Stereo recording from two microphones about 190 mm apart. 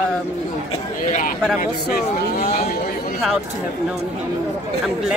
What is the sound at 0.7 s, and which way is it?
Speech, 40° left (ahead or behind).